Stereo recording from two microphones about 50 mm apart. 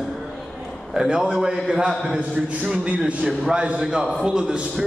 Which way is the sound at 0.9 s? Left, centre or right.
Centre.